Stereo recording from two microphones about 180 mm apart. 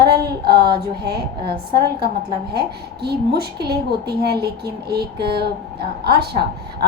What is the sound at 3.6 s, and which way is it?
A woman's voice, 65° right (ahead or behind).